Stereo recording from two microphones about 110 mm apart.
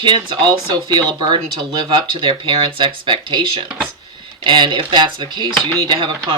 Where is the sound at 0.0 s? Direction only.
45° right (ahead or behind).